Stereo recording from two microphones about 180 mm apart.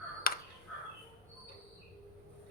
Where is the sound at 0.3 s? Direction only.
55° left (ahead or behind).